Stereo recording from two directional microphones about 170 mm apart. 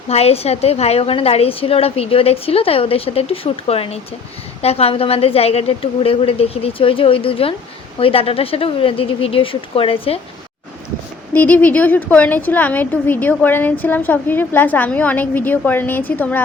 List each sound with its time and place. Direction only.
0.1 s a woman's voice: 35° left (ahead or behind)
11.3 s a woman's voice: 10° left (ahead or behind)